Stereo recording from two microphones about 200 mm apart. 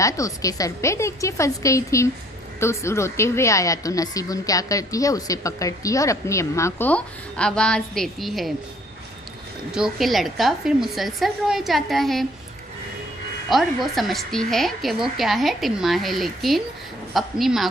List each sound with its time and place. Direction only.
0.0 s speech: 15° left (ahead or behind); by 8.5 s centre (ahead or behind)
9.7 s a woman's voice: centre (ahead or behind)
13.5 s a woman's voice: centre (ahead or behind)